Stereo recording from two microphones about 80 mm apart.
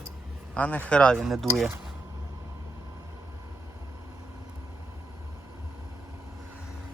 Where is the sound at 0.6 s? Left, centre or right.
Left.